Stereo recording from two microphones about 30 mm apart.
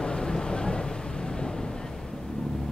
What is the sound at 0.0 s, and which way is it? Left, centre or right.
Vehicle, left.